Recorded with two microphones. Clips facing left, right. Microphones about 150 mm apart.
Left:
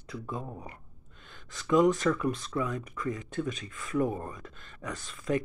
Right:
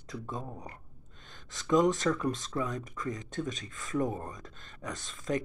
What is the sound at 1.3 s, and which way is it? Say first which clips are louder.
Speech: left 1 dB; 40° right (ahead or behind).